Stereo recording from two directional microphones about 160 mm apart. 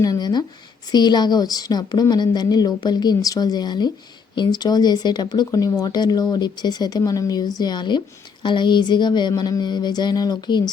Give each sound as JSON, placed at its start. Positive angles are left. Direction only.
{"t": 0.0, "sound": "speech", "side_deg": 25}